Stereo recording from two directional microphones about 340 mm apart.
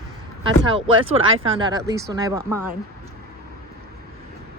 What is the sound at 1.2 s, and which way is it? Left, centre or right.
Speech, right.